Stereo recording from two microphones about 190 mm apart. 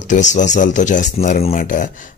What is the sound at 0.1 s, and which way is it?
Speech, 40° left (ahead or behind).